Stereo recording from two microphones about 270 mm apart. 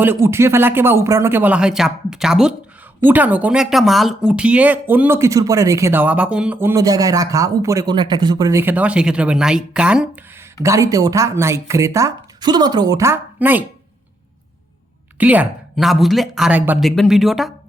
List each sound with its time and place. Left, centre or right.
0.0 s speech: centre
15.2 s speech: centre